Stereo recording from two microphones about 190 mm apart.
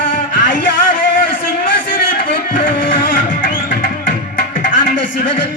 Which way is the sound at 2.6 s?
45° left (ahead or behind).